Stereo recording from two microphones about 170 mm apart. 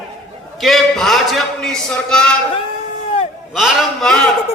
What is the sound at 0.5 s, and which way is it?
A man's voice, centre (ahead or behind).